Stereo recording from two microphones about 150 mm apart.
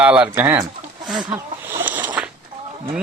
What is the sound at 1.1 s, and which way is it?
Speech, centre (ahead or behind).